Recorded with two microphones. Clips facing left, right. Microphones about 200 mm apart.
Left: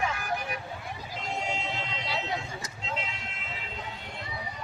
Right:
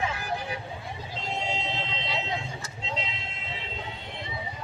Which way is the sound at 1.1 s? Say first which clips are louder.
Right 1 dB; 25° right (ahead or behind).